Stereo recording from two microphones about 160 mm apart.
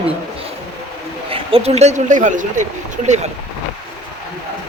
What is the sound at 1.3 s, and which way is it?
Speech, 35° right (ahead or behind).